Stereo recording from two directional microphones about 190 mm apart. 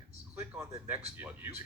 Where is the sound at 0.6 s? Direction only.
15° right (ahead or behind).